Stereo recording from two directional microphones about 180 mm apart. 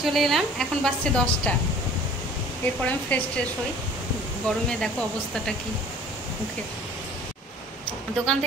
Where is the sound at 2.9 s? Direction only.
10° left (ahead or behind).